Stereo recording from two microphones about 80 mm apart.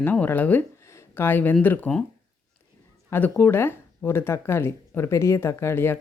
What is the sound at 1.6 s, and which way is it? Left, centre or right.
Speech, left.